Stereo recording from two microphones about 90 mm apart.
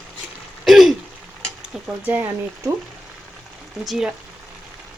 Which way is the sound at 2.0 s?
25° right (ahead or behind).